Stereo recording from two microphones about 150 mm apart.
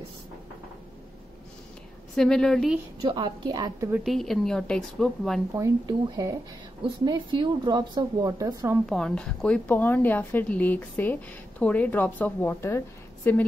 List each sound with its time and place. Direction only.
2.1 s speech: 5° left (ahead or behind)
3.0 s speech: 30° right (ahead or behind)
4.0 s speech: centre (ahead or behind)
5.5 s speech: 20° right (ahead or behind)
8.8 s a woman's voice: 5° left (ahead or behind)